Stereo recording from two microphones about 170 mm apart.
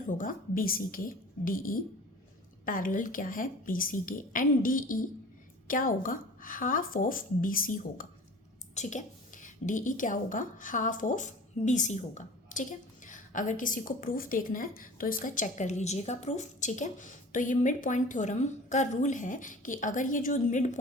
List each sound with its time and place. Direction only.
0.2 s a woman's voice: 55° left (ahead or behind)
8.7 s a woman's voice: 45° left (ahead or behind)